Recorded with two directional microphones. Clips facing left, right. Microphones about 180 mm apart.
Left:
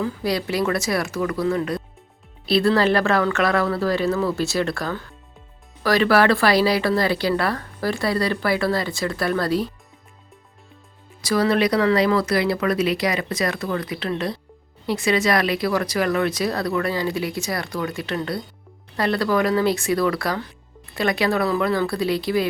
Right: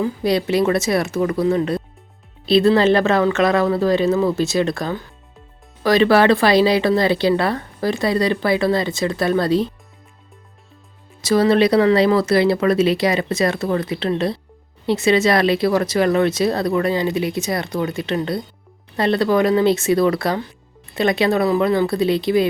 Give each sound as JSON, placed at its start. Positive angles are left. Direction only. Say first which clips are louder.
{"t": 0.0, "sound": "speech", "louder": "right 5 dB", "side_deg": -20}
{"t": 11.2, "sound": "speech", "louder": "right 5 dB", "side_deg": -25}